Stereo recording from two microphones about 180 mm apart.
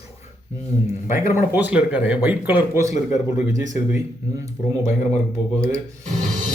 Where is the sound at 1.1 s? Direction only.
15° right (ahead or behind).